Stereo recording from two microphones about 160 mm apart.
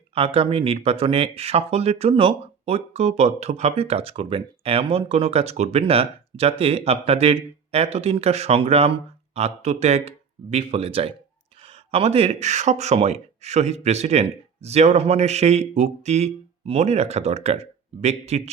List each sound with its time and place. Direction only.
0.1 s speech: 35° right (ahead or behind)